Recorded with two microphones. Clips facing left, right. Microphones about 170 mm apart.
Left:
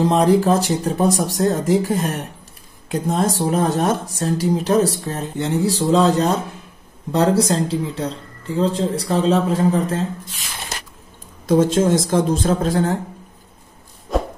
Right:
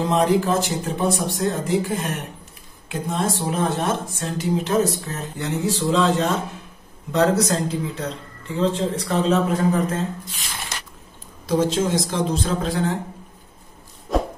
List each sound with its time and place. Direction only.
0.0 s speech: 35° left (ahead or behind)
11.4 s speech: 50° left (ahead or behind)
14.1 s a sound: centre (ahead or behind)